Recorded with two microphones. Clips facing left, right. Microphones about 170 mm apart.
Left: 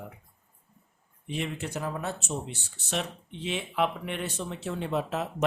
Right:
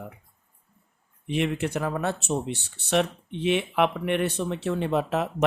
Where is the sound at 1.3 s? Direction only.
65° right (ahead or behind).